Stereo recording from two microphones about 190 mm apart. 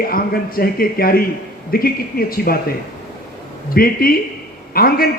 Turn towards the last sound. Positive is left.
turn(degrees=50)  # may be behind; listen again after turning